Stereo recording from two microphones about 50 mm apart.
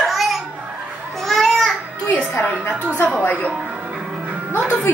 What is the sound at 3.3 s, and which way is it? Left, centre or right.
Music, right.